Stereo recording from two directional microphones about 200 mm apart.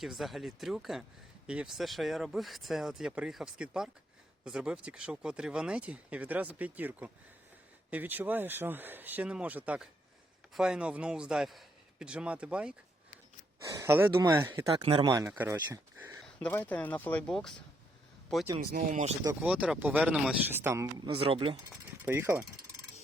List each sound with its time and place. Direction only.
0.0 s speech: centre (ahead or behind)
14.8 s speech: 25° right (ahead or behind)
16.2 s speech: 5° left (ahead or behind)
18.7 s speech: 40° right (ahead or behind)
19.2 s speech: 10° right (ahead or behind)
21.1 s speech: 25° right (ahead or behind)
22.0 s speech: 10° right (ahead or behind)